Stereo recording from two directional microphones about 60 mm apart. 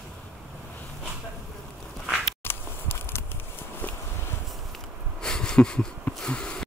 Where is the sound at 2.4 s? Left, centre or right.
Left.